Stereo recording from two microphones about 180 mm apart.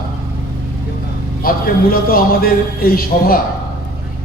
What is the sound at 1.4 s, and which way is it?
Speech, 55° left (ahead or behind).